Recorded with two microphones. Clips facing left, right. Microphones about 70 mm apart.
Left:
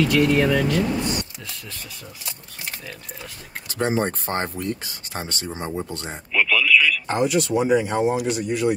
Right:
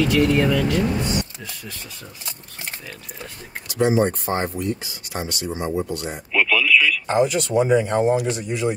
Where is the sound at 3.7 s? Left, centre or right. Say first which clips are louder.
Right 4 dB; left.